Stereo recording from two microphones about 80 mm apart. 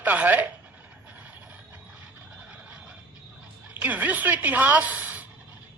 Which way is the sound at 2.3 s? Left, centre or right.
Centre.